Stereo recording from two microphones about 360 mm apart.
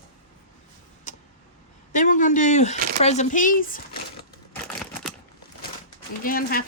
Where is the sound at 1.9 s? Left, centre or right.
Left.